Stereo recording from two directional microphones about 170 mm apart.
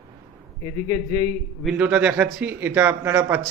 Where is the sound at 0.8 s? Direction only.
20° left (ahead or behind).